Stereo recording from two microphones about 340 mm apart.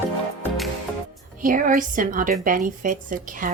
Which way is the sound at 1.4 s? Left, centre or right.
Right.